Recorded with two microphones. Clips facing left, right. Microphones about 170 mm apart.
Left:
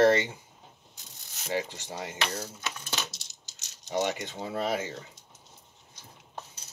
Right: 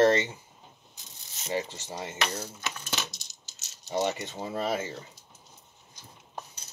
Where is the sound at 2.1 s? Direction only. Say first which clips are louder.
Right 1 dB; 20° right (ahead or behind).